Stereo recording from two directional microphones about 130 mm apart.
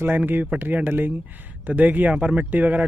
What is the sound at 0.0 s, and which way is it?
Speech, 15° right (ahead or behind).